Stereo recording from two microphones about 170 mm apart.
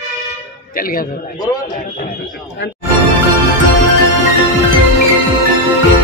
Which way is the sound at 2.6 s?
90° left.